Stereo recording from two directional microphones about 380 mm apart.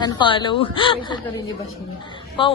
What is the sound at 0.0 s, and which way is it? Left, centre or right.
A woman's voice, centre.